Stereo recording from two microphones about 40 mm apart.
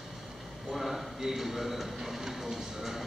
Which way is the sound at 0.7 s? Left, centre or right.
Centre.